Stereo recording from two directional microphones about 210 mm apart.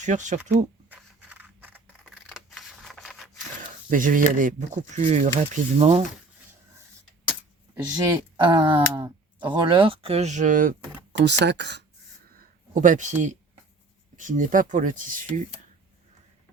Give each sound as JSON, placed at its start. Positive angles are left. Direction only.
{"t": 0.0, "sound": "speech", "side_deg": -35}
{"t": 0.9, "sound": "scissors", "side_deg": -5}
{"t": 3.3, "sound": "speech", "side_deg": -40}
{"t": 7.9, "sound": "speech", "side_deg": -15}
{"t": 11.1, "sound": "speech", "side_deg": -55}
{"t": 12.4, "sound": "a sound", "side_deg": -40}
{"t": 14.2, "sound": "speech", "side_deg": -40}